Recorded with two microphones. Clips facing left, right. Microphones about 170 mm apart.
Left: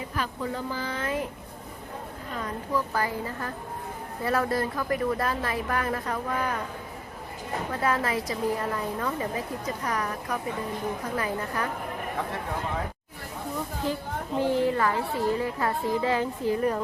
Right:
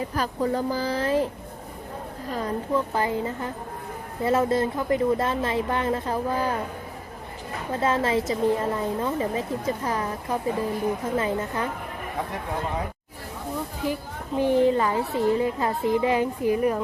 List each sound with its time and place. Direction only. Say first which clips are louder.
0.1 s speech: right 4 dB; 40° right (ahead or behind)
2.3 s a woman's voice: right 4 dB; 30° right (ahead or behind)
7.7 s a woman's voice: right 5 dB; 25° right (ahead or behind)
13.8 s a woman's voice: right 1 dB; 15° right (ahead or behind)